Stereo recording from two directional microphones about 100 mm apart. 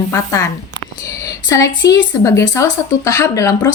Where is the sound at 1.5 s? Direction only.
35° left (ahead or behind).